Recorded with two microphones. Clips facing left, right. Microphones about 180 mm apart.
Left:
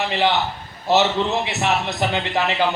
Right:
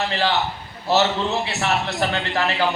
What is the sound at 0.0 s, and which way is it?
A man's voice, 20° left (ahead or behind).